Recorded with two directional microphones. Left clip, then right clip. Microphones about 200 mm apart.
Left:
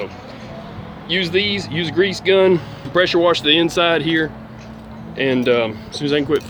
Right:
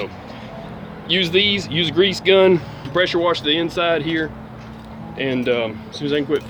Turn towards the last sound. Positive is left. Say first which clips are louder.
# left 2 dB
turn(degrees=35)  # may be behind; listen again after turning